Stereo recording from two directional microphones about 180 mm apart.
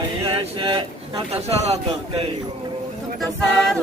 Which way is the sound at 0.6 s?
30° right (ahead or behind).